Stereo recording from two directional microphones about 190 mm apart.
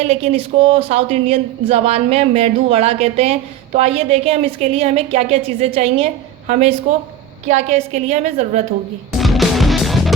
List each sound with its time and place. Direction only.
0.0 s speech: 30° right (ahead or behind)
9.1 s music: centre (ahead or behind)